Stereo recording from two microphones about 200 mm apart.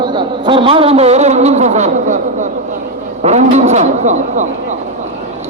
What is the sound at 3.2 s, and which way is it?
Speech, 35° right (ahead or behind).